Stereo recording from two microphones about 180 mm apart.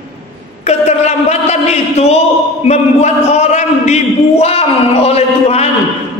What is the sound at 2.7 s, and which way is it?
A man's voice, 40° left (ahead or behind).